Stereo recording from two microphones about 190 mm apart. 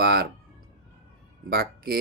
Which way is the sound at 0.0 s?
55° right (ahead or behind).